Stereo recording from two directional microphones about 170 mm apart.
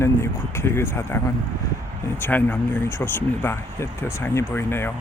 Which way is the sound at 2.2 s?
10° left (ahead or behind).